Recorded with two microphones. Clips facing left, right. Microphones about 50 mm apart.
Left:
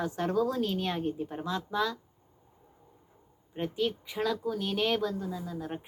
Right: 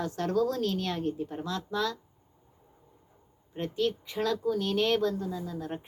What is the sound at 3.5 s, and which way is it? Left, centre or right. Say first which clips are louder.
A woman's voice: right 1 dB; centre.